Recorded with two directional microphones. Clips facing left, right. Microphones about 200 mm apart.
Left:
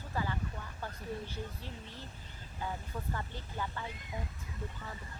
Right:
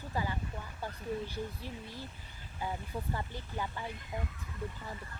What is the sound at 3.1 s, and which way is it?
Speech, 15° right (ahead or behind).